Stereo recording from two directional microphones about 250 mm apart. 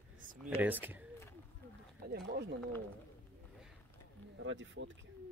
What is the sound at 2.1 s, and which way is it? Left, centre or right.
Speech, right.